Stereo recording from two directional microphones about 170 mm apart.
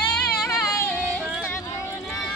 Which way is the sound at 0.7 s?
15° left (ahead or behind).